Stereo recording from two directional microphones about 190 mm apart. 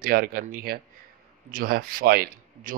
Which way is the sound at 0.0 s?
50° right (ahead or behind).